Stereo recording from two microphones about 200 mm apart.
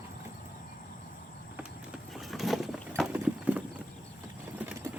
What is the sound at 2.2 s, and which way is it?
Vehicle, centre (ahead or behind).